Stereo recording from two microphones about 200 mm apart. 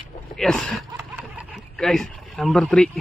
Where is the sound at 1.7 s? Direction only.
5° left (ahead or behind).